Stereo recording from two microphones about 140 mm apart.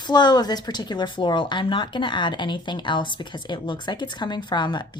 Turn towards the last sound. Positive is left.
turn(degrees=30)  # may be behind; listen again after turning